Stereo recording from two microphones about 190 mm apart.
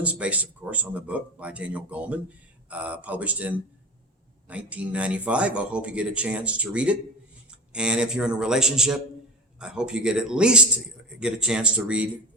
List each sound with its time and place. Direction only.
0.0 s speech: 5° right (ahead or behind)